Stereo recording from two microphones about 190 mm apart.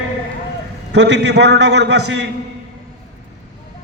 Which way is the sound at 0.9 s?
65° right (ahead or behind).